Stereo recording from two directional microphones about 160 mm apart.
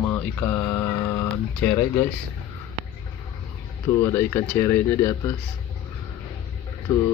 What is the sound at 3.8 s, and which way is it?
Speech, 20° left (ahead or behind).